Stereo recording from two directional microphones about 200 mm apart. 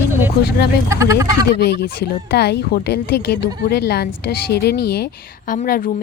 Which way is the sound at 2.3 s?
55° left (ahead or behind).